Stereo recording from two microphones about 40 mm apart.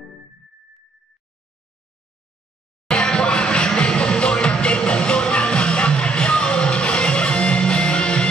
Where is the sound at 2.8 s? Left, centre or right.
Left.